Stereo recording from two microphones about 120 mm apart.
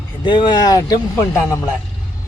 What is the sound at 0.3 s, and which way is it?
A man's voice, 40° left (ahead or behind).